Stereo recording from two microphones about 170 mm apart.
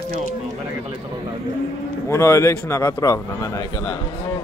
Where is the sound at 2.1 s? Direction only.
15° left (ahead or behind).